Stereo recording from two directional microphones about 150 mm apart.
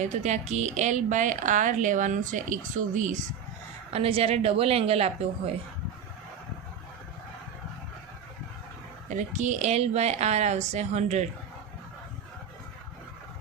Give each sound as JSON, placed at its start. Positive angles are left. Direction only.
{"t": 0.0, "sound": "speech", "side_deg": -50}
{"t": 3.9, "sound": "a woman's voice", "side_deg": -40}
{"t": 9.0, "sound": "a woman's voice", "side_deg": -55}